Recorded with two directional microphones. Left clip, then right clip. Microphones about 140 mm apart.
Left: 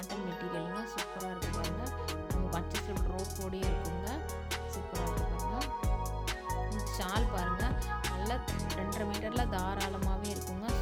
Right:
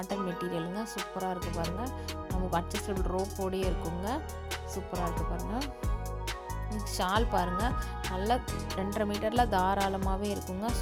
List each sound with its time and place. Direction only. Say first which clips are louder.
0.9 s music: right 4 dB; centre (ahead or behind)
4.9 s music: right 4 dB; centre (ahead or behind)
7.0 s speech: right 7 dB; 25° right (ahead or behind)
9.0 s music: right 10 dB; 30° right (ahead or behind)
9.7 s music: right 6 dB; centre (ahead or behind)